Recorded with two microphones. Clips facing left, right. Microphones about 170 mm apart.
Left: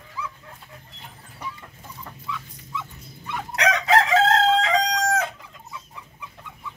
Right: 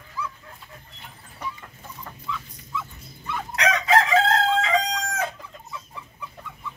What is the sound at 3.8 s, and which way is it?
Chicken, 75° left (ahead or behind).